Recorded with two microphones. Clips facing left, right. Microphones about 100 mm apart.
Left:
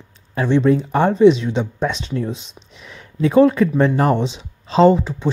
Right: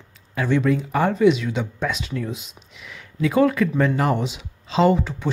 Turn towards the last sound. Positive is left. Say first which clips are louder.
# left 5 dB
turn(degrees=20)  # may be behind; listen again after turning